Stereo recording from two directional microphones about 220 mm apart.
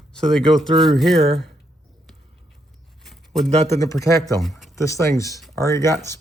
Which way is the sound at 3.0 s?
Centre (ahead or behind).